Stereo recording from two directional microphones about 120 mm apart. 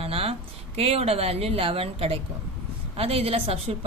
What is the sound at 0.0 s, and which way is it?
A woman's voice, 55° right (ahead or behind).